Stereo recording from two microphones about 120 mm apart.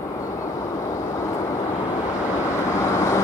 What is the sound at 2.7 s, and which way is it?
Vehicle, 25° left (ahead or behind).